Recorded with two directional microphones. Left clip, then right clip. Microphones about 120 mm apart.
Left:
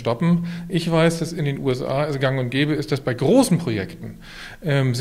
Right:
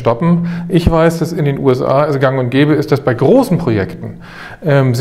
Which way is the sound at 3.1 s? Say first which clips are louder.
Right 6 dB; 45° right (ahead or behind).